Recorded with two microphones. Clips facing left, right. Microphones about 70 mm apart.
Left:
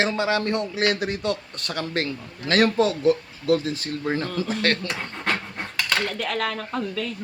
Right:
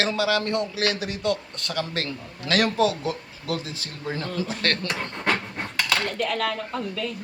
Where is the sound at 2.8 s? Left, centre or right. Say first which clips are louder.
Left 3 dB; left.